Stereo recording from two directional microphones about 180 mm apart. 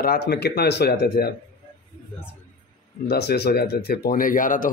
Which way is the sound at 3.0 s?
65° left (ahead or behind).